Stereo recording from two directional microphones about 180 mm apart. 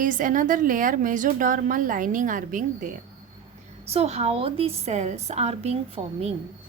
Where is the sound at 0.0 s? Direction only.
45° right (ahead or behind).